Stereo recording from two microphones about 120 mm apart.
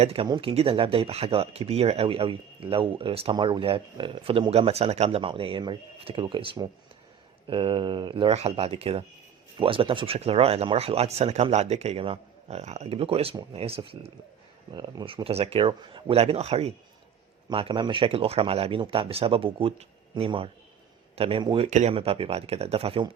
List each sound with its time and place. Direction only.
0.0 s speech: 55° right (ahead or behind)
0.3 s speech: 40° right (ahead or behind)
0.5 s speech: 50° right (ahead or behind)
3.3 s speech: 40° right (ahead or behind); by 5.2 s 65° right (ahead or behind)
5.2 s speech: 45° right (ahead or behind)
8.3 s speech: 60° right (ahead or behind)
14.7 s speech: 40° right (ahead or behind); by 16.7 s 60° right (ahead or behind)
17.5 s speech: 45° right (ahead or behind)
21.7 s speech: 80° right
21.9 s speech: 55° right (ahead or behind)